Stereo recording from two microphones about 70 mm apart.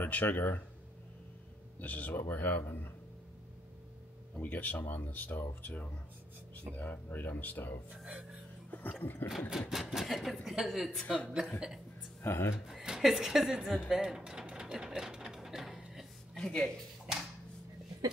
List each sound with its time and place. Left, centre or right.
0.0 s speech: left
1.8 s speech: left
4.4 s speech: left
7.9 s speech: centre
8.6 s a sound: left
9.0 s speech: left
9.5 s speech: centre
12.2 s speech: left
12.6 s speech: centre
16.3 s speech: centre
17.1 s a sound: centre